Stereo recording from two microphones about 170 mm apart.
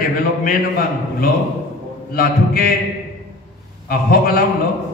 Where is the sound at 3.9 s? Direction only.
60° left (ahead or behind).